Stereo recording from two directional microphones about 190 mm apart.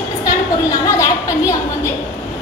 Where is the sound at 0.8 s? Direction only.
15° left (ahead or behind).